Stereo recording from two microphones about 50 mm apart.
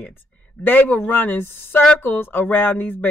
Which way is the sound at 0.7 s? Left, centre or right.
Left.